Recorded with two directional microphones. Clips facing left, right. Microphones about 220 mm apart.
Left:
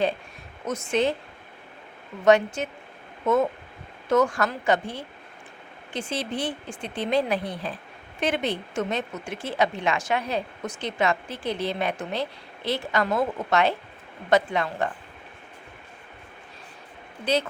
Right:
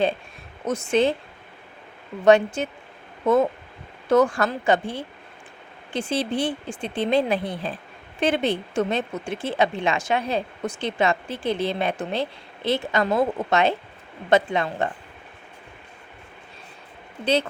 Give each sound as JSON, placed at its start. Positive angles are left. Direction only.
{"t": 0.6, "sound": "speech", "side_deg": -30}
{"t": 2.2, "sound": "speech", "side_deg": -30}